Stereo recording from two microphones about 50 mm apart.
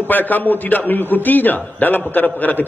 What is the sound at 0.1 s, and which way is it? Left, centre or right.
A man's voice, left.